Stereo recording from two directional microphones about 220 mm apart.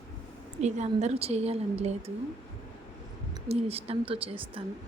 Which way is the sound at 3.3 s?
25° right (ahead or behind).